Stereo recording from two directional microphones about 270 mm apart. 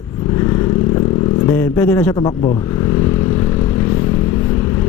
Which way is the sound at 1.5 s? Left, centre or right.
Centre.